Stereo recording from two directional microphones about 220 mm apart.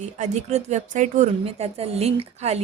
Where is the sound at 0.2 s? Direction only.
30° right (ahead or behind).